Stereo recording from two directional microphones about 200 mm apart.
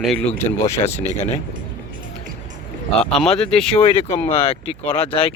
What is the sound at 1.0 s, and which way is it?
Speech, 30° left (ahead or behind).